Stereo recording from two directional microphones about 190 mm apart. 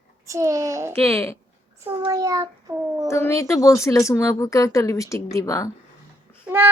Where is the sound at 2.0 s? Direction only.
20° right (ahead or behind).